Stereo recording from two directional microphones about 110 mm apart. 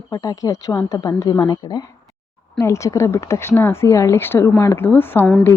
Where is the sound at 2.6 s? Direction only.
25° left (ahead or behind).